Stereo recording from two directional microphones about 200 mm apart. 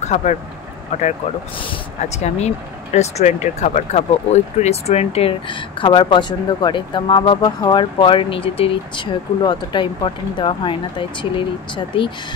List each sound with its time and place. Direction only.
0.0 s speech: 35° left (ahead or behind)
1.6 s speech: 30° left (ahead or behind)